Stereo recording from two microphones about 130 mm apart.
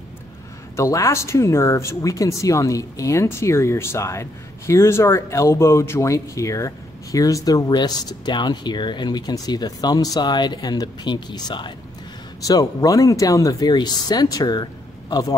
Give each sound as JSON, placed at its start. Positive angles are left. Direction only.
{"t": 0.7, "sound": "speech", "side_deg": 25}